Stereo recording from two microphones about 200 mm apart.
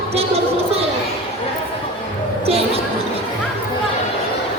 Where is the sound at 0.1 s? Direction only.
30° right (ahead or behind).